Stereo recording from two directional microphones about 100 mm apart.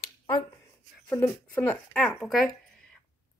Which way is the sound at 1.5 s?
20° left (ahead or behind).